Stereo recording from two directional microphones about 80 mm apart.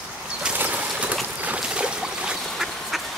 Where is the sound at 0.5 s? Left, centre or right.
Centre.